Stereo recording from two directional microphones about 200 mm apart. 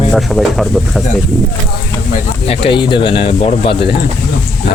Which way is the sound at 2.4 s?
25° left (ahead or behind).